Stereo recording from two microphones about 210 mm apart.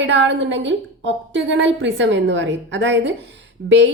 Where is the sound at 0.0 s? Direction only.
60° right (ahead or behind).